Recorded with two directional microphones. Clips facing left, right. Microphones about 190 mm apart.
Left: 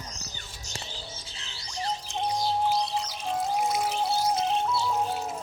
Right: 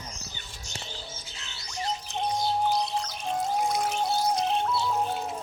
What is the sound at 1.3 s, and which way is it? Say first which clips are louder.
Music: even; 30° left (ahead or behind).